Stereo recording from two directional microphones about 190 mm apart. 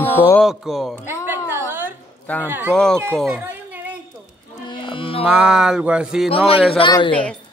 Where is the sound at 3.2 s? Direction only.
10° right (ahead or behind).